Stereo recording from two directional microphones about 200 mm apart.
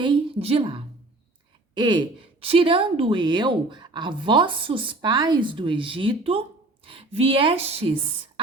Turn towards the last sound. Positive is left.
turn(degrees=-30)  # may be behind; listen again after turning